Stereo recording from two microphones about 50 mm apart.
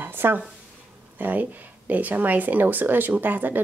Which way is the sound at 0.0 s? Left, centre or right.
Right.